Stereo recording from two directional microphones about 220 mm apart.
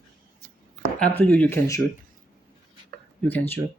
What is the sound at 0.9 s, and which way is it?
Speech, 5° left (ahead or behind).